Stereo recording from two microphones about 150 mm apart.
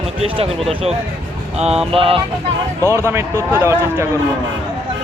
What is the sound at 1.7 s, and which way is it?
Music, 5° right (ahead or behind).